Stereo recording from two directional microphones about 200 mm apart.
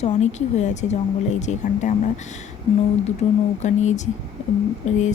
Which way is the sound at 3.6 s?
35° left (ahead or behind).